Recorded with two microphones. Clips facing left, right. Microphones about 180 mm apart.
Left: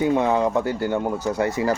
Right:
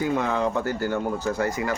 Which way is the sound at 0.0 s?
20° left (ahead or behind).